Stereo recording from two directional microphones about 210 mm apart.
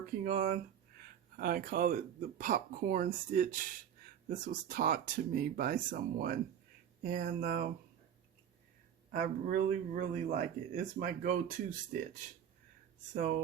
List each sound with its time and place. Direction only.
0.3 s speech: 40° right (ahead or behind)
9.1 s speech: 40° right (ahead or behind)